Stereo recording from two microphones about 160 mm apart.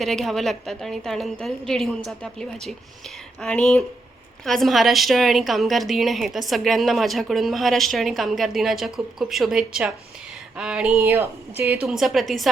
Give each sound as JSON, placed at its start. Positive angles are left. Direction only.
{"t": 0.0, "sound": "a woman's voice", "side_deg": 0}
{"t": 11.8, "sound": "a woman's voice", "side_deg": 0}